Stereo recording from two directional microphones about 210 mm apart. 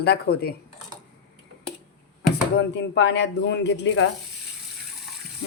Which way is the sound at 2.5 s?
55° left (ahead or behind).